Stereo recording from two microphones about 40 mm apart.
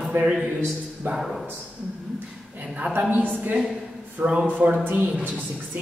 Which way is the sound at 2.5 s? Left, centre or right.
Right.